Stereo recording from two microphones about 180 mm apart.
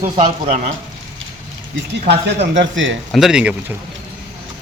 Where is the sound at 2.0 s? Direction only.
70° right (ahead or behind); by 3.0 s 90° right.